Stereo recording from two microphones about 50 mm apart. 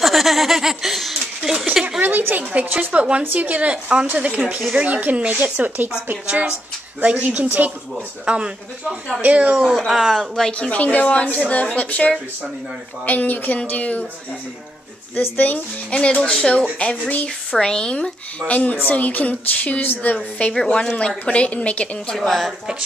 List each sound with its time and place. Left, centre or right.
0.0 s speech: centre
1.6 s a sound: centre
2.0 s speech: right
2.9 s a woman's voice: right
7.2 s speech: right
8.3 s a woman's voice: right
9.8 s speech: centre
10.3 s speech: centre
10.7 s a woman's voice: left
15.1 s a woman's voice: left
15.9 s a woman's voice: left
18.5 s a woman's voice: left
22.1 s speech: centre